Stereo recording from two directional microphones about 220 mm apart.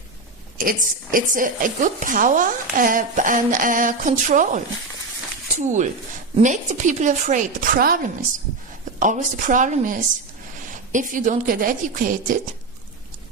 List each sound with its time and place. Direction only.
0.6 s speech: 40° right (ahead or behind)
9.0 s speech: 35° right (ahead or behind)